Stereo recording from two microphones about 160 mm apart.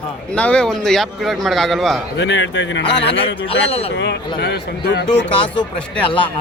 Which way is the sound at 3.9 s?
90° left.